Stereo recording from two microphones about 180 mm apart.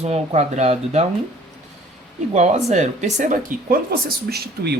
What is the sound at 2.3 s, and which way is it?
Speech, 40° right (ahead or behind).